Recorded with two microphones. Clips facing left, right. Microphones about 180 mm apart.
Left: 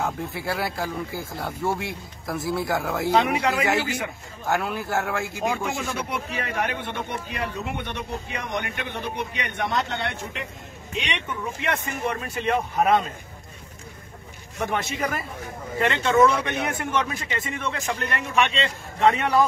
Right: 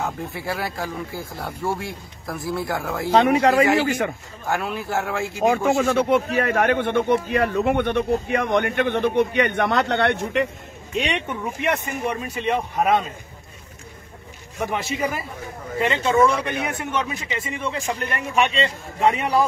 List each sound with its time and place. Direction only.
0.5 s speech: centre (ahead or behind)
3.1 s a man's voice: 40° right (ahead or behind)
4.5 s speech: centre (ahead or behind)
5.4 s speech: 55° right (ahead or behind)
11.2 s a man's voice: 15° right (ahead or behind)
12.4 s speech: centre (ahead or behind)
14.6 s a man's voice: 5° right (ahead or behind)